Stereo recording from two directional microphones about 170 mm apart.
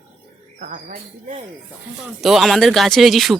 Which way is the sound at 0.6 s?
50° right (ahead or behind).